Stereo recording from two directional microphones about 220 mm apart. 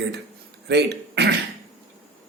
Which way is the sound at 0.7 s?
50° right (ahead or behind).